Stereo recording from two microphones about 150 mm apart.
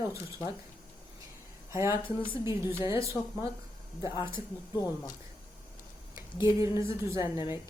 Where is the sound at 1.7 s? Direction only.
20° right (ahead or behind).